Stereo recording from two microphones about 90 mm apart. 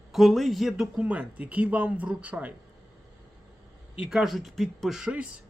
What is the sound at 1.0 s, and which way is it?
A man's voice, 15° right (ahead or behind).